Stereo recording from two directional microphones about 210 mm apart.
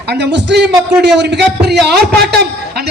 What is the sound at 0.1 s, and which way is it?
A man's voice, 55° right (ahead or behind).